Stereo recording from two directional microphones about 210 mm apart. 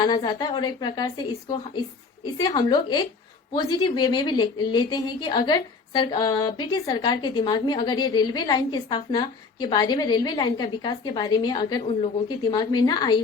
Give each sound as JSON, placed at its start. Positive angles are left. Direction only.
{"t": 0.0, "sound": "a woman's voice", "side_deg": 20}